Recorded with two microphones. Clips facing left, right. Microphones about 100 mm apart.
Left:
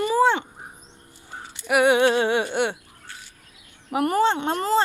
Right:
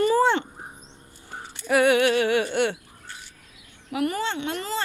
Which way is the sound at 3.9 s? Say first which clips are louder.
Left 6 dB; 40° left (ahead or behind).